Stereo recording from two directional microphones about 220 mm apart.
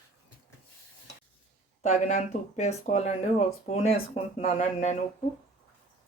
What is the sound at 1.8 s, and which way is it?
Speech, 35° left (ahead or behind).